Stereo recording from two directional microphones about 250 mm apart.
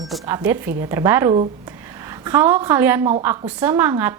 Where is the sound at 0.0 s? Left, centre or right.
Centre.